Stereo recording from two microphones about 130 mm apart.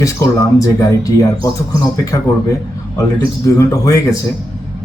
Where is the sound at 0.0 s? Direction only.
25° left (ahead or behind).